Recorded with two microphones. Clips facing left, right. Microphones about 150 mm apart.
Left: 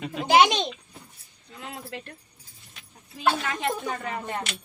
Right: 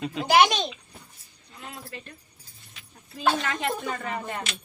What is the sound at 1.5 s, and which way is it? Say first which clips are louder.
Speech: left 3 dB; 85° left.